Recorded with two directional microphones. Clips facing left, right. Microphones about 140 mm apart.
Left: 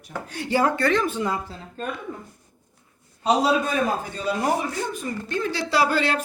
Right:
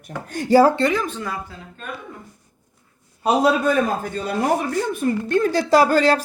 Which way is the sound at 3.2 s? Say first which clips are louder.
Right 3 dB; 55° right (ahead or behind).